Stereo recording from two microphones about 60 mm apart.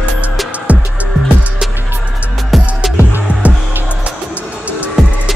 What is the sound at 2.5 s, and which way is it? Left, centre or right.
Music, centre.